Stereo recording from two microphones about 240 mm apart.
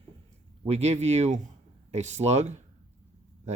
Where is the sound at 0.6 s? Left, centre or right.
Right.